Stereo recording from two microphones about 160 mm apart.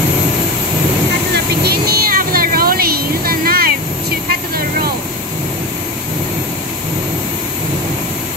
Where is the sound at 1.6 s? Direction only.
75° right (ahead or behind).